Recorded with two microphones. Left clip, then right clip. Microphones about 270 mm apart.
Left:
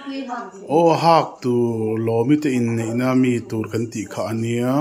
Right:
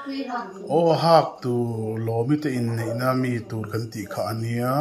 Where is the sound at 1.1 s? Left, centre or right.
Left.